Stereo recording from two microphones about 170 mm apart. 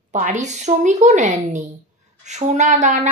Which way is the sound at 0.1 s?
45° right (ahead or behind).